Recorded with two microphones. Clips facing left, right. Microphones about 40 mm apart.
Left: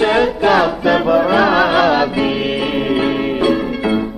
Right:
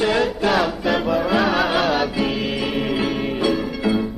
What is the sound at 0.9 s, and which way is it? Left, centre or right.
Music, left.